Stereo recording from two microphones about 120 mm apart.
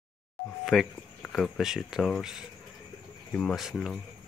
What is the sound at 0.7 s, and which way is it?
Speech, centre (ahead or behind).